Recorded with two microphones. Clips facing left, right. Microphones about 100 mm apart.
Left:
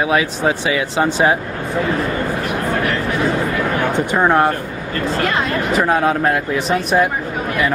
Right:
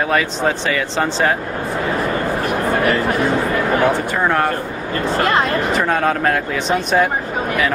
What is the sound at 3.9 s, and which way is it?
Speech, 20° left (ahead or behind).